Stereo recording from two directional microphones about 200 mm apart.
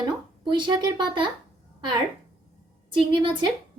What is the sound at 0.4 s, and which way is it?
Speech, 20° right (ahead or behind).